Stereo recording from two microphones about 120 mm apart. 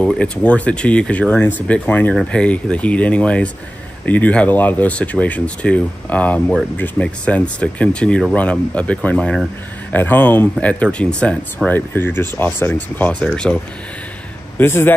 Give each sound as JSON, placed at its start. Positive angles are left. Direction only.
{"t": 0.0, "sound": "speech", "side_deg": 10}
{"t": 13.2, "sound": "speech", "side_deg": 5}
{"t": 14.6, "sound": "speech", "side_deg": 20}